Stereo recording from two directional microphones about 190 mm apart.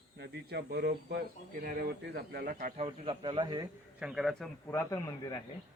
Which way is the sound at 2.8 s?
25° right (ahead or behind).